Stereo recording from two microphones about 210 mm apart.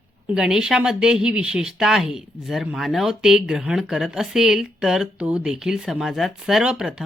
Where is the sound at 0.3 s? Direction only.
5° right (ahead or behind).